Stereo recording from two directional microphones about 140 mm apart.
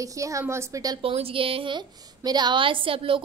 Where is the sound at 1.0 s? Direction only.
45° right (ahead or behind).